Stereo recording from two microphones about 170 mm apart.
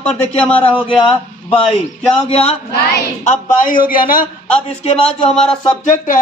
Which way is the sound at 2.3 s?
35° left (ahead or behind).